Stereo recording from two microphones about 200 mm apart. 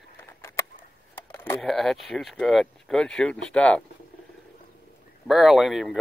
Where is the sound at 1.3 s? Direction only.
10° left (ahead or behind).